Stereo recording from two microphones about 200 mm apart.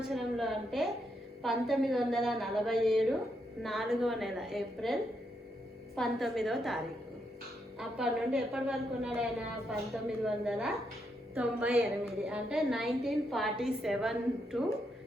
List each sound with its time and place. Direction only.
0.1 s a woman's voice: centre (ahead or behind)
6.0 s a woman's voice: centre (ahead or behind)
7.8 s a woman's voice: 5° right (ahead or behind)